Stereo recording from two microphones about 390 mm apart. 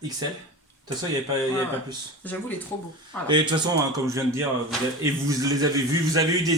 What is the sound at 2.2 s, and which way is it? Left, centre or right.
Speech, centre.